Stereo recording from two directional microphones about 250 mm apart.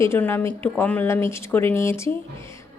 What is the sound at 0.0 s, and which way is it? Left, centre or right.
Speech, centre.